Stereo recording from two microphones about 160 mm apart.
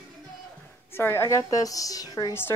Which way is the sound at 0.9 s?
15° left (ahead or behind).